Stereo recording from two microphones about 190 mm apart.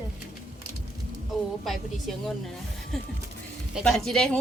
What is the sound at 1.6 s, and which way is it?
Speech, centre (ahead or behind).